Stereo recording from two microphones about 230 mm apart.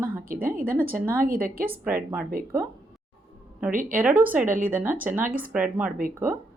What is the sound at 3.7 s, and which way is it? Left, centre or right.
Speech, right.